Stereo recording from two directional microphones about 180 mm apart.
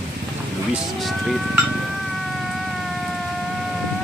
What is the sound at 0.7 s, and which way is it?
Speech, centre (ahead or behind).